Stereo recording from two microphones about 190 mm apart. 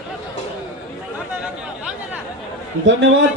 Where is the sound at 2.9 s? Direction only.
75° right (ahead or behind).